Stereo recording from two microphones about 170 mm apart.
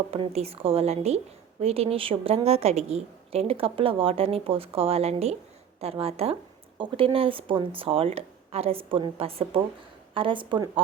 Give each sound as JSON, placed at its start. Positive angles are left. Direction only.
{"t": 0.1, "sound": "a woman's voice", "side_deg": -35}